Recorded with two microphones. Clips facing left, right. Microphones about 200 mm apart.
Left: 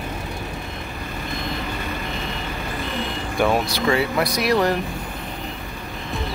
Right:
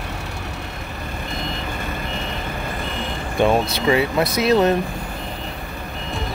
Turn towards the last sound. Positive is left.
turn(degrees=-25)  # may be behind; listen again after turning